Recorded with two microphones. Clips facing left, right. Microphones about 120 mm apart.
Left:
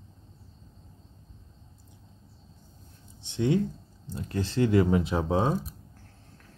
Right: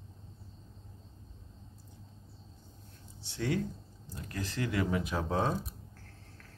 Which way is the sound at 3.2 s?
20° left (ahead or behind).